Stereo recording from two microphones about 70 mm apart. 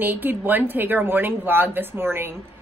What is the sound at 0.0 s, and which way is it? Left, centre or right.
A woman's voice, right.